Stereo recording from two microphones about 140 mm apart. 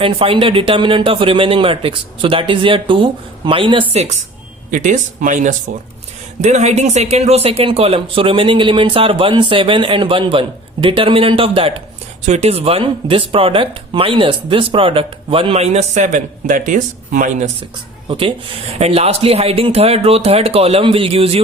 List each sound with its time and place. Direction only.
0.0 s a man's voice: 40° right (ahead or behind)
4.7 s a man's voice: 70° right (ahead or behind); by 16.0 s 50° right (ahead or behind)
16.0 s speech: 75° right (ahead or behind)
18.1 s a man's voice: 40° right (ahead or behind)